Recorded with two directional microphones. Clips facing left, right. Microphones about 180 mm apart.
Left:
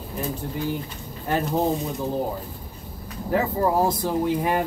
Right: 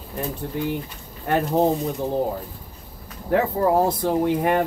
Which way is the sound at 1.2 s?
60° right (ahead or behind).